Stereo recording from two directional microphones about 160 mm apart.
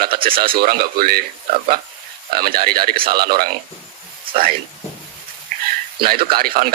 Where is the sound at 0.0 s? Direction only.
65° right (ahead or behind).